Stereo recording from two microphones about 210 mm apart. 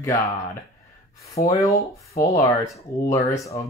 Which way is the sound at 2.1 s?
40° left (ahead or behind).